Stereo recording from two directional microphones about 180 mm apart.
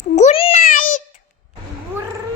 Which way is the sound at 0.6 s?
50° left (ahead or behind).